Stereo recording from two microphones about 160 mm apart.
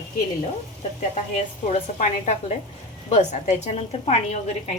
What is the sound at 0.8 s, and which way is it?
A woman's voice, 40° left (ahead or behind).